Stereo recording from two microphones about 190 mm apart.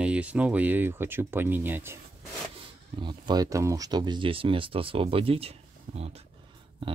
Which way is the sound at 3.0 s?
25° right (ahead or behind).